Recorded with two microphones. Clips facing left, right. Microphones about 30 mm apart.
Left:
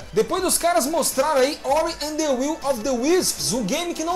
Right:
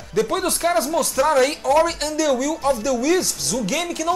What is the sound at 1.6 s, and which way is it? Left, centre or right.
Speech, left.